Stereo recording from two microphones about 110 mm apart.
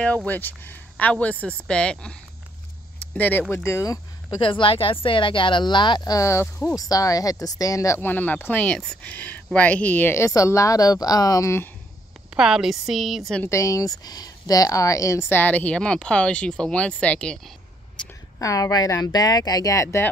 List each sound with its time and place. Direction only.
0.0 s speech: 10° left (ahead or behind)
3.2 s a woman's voice: 15° left (ahead or behind)
4.4 s a woman's voice: 50° left (ahead or behind); by 11.7 s 25° left (ahead or behind)
12.4 s a woman's voice: 5° right (ahead or behind)
13.5 s speech: 30° left (ahead or behind); by 17.4 s 10° left (ahead or behind)
18.4 s speech: 30° left (ahead or behind)